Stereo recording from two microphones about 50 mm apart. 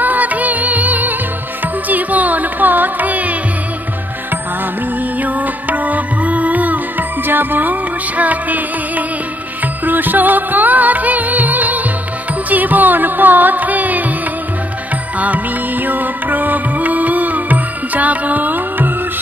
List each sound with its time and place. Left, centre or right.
0.0 s music: right
1.9 s carnatic music: right
5.2 s music: right
15.1 s music: right